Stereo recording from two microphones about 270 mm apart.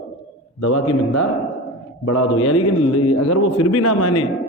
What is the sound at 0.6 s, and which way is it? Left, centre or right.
A man's voice, left.